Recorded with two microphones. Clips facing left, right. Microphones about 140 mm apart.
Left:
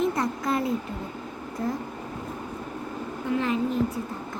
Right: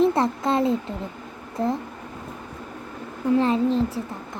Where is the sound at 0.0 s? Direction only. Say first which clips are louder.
Right 6 dB; 25° right (ahead or behind).